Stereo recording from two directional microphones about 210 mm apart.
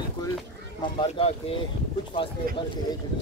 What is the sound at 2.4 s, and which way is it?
Speech, 45° right (ahead or behind).